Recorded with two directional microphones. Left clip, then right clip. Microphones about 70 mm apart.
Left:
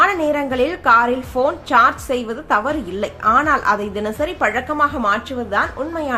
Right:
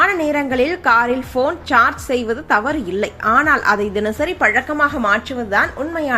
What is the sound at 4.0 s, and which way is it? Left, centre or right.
A woman's voice, right.